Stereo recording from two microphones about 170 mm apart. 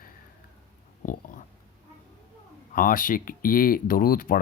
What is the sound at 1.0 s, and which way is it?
Dog, 50° left (ahead or behind).